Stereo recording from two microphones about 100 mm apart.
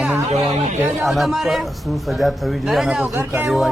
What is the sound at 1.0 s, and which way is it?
A man's voice, centre (ahead or behind).